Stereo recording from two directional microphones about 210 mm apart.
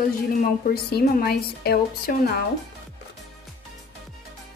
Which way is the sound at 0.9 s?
50° left (ahead or behind).